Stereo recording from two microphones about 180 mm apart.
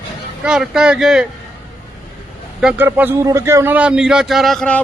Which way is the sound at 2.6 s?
5° right (ahead or behind).